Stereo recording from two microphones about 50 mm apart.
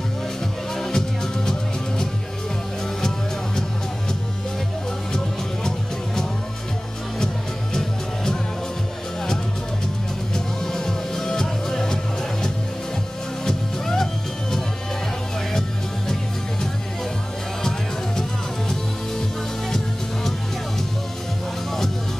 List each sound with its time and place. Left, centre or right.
0.7 s music: centre
10.3 s music: centre
13.5 s music: centre